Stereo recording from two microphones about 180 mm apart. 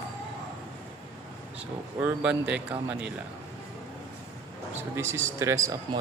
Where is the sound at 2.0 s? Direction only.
5° right (ahead or behind).